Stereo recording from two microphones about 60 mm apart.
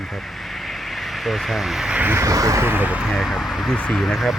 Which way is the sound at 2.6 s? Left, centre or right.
Right.